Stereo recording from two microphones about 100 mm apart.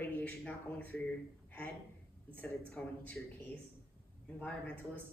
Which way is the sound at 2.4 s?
15° left (ahead or behind).